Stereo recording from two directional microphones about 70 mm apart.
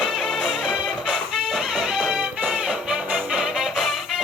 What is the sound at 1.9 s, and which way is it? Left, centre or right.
Music, centre.